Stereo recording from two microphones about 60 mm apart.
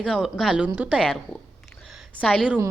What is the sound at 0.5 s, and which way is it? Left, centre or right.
Speech, right.